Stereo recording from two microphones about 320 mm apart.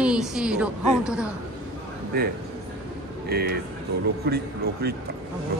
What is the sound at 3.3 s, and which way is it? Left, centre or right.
Speech, right.